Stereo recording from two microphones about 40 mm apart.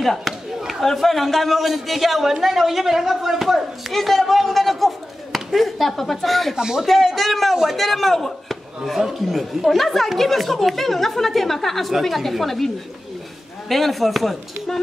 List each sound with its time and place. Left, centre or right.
0.0 s a man's voice: centre
6.5 s speech: centre
6.9 s a man's voice: centre